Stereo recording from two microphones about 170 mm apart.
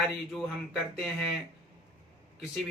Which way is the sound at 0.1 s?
Centre (ahead or behind).